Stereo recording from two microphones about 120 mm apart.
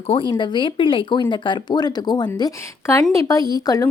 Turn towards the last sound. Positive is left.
turn(degrees=30)  # may be behind; listen again after turning